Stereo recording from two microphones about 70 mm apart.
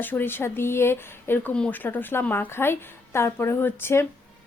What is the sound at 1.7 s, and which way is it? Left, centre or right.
A woman's voice, left.